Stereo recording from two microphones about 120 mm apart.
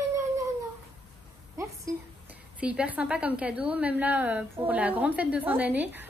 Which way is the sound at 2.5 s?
10° right (ahead or behind).